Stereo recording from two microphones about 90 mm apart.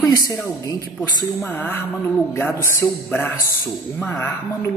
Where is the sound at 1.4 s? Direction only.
25° left (ahead or behind).